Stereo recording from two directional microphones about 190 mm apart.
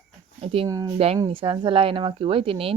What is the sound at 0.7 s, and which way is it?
Speech, 20° right (ahead or behind).